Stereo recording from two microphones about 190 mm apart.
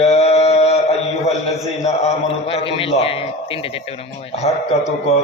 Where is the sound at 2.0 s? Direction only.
35° left (ahead or behind).